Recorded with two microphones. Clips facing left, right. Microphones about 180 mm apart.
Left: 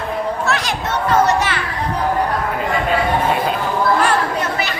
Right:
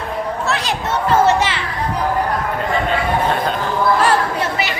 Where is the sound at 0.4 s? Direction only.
30° right (ahead or behind).